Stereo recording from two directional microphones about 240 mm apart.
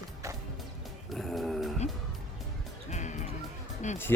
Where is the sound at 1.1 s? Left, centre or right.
Centre.